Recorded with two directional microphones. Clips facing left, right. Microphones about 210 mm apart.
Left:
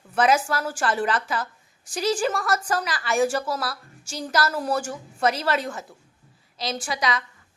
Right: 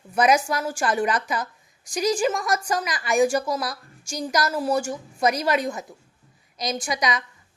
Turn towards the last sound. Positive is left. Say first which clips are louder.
# right 1 dB
turn(degrees=-15)  # may be behind; listen again after turning